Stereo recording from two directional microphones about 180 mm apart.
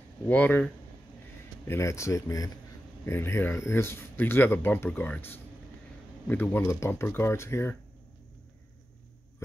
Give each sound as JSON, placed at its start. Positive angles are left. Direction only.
{"t": 0.3, "sound": "speech", "side_deg": 10}
{"t": 1.7, "sound": "speech", "side_deg": 15}